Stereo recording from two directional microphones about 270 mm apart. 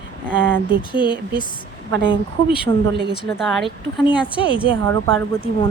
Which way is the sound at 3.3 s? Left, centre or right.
Centre.